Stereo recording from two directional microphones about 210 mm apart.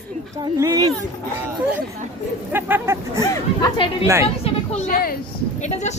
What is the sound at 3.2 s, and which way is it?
Speech, 20° left (ahead or behind).